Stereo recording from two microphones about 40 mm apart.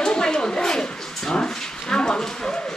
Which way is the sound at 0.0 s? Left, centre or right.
Centre.